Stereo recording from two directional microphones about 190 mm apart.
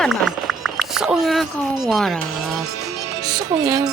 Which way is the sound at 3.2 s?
20° right (ahead or behind).